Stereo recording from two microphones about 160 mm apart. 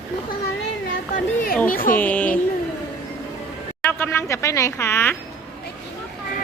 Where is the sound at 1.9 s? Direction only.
10° left (ahead or behind).